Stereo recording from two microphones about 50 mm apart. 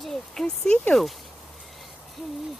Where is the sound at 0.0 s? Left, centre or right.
Centre.